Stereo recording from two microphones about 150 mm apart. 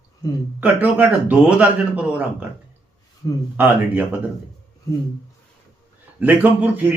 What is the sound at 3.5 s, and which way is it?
Speech, 10° right (ahead or behind).